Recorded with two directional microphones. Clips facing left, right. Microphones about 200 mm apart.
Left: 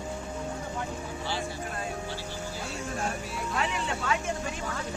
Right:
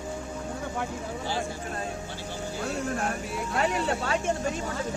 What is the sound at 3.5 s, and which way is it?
Speech, 40° right (ahead or behind).